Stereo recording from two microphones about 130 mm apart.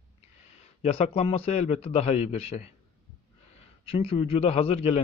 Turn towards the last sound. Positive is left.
turn(degrees=50)  # may be behind; listen again after turning